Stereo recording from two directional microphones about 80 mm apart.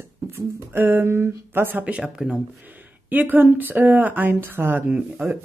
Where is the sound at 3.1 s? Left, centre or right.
Right.